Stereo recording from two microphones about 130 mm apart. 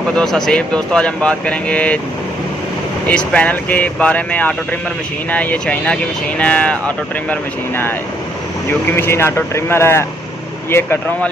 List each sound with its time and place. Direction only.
0.1 s speech: 5° left (ahead or behind)
3.1 s speech: 10° left (ahead or behind)
8.9 s speech: 20° left (ahead or behind)